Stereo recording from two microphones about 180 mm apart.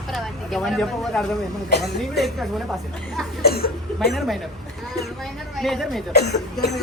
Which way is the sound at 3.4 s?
60° left (ahead or behind).